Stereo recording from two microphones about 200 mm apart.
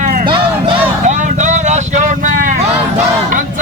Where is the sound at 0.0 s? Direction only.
40° right (ahead or behind).